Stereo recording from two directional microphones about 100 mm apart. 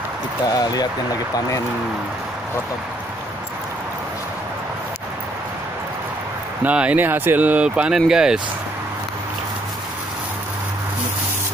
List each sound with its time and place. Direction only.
0.5 s speech: 40° left (ahead or behind)
6.6 s speech: 15° right (ahead or behind)